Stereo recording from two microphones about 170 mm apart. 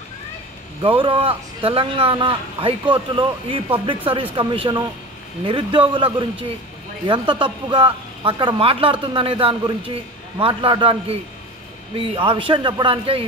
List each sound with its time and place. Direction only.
0.8 s a man's voice: 30° right (ahead or behind)